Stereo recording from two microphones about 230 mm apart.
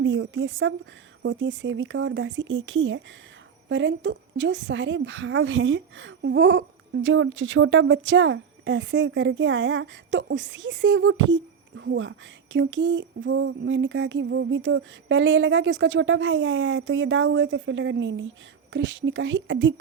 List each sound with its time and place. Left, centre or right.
0.0 s a woman's voice: right
12.5 s a sound: right
18.7 s a woman's voice: right